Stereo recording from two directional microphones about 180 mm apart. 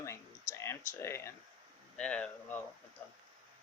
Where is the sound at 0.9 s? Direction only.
15° left (ahead or behind).